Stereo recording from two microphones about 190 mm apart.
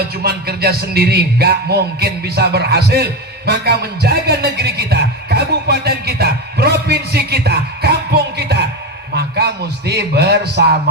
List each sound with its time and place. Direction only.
0.2 s music: 55° right (ahead or behind)
9.1 s a man's voice: 60° right (ahead or behind)